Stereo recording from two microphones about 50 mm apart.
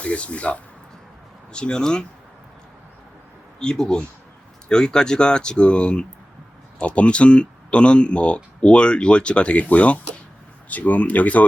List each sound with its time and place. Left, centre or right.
0.0 s speech: left
1.5 s speech: centre
3.6 s speech: centre; by 11.4 s left